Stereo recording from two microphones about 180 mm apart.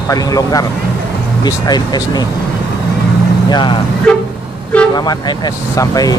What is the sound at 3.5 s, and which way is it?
Speech, 25° left (ahead or behind).